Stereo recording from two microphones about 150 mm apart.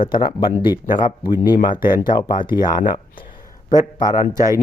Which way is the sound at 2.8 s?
60° left (ahead or behind).